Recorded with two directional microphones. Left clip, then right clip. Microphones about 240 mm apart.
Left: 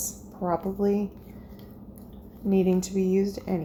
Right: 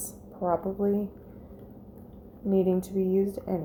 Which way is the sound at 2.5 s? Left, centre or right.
Centre.